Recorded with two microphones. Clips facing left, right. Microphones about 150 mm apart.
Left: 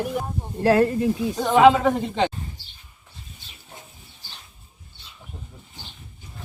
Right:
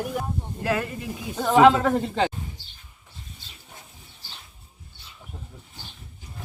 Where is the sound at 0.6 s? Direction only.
35° left (ahead or behind).